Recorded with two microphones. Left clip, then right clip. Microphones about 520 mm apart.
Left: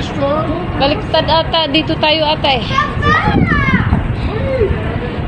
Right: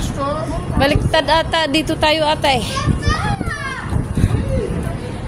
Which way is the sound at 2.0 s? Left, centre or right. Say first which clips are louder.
Left 1 dB; right.